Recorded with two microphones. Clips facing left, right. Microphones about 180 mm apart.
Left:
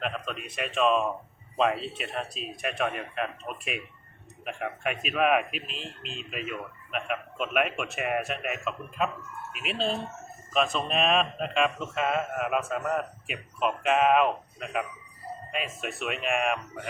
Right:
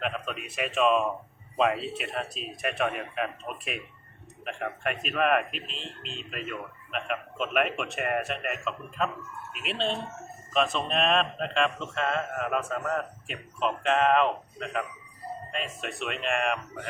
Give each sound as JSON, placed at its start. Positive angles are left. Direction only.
{"t": 0.0, "sound": "speech", "side_deg": -5}